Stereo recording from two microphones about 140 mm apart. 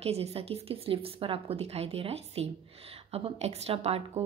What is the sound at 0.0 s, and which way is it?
A woman's voice, 45° right (ahead or behind).